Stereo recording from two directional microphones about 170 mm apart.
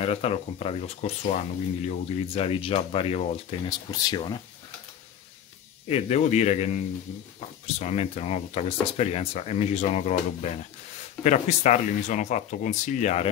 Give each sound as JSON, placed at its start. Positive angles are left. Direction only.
{"t": 0.0, "sound": "speech", "side_deg": 35}
{"t": 3.6, "sound": "speech", "side_deg": 25}
{"t": 5.9, "sound": "speech", "side_deg": 35}